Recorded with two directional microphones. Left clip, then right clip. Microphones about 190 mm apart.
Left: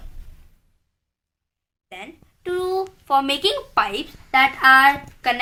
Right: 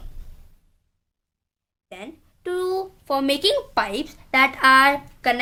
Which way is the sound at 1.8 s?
65° right (ahead or behind).